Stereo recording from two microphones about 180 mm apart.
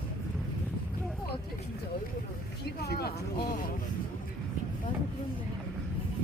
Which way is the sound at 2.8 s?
60° left (ahead or behind).